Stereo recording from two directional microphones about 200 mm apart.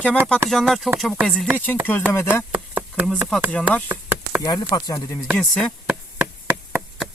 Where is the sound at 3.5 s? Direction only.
5° left (ahead or behind).